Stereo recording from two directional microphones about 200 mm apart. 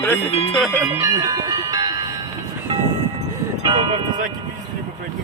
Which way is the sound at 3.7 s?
25° right (ahead or behind).